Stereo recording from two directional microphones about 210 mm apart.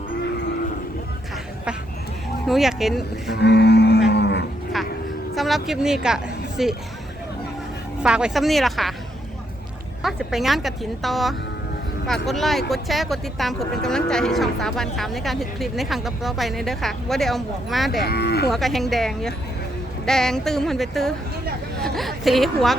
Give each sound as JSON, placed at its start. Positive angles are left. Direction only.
{"t": 2.5, "sound": "speech", "side_deg": 0}
{"t": 3.2, "sound": "a sound", "side_deg": 50}
{"t": 4.1, "sound": "livestock", "side_deg": 55}
{"t": 5.3, "sound": "speech", "side_deg": 0}
{"t": 8.0, "sound": "speech", "side_deg": -5}
{"t": 10.0, "sound": "speech", "side_deg": 0}
{"t": 18.0, "sound": "cattle", "side_deg": 50}
{"t": 18.4, "sound": "speech", "side_deg": 0}